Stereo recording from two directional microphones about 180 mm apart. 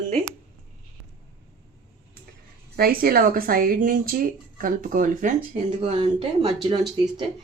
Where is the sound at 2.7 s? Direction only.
55° right (ahead or behind); by 6.7 s 30° right (ahead or behind).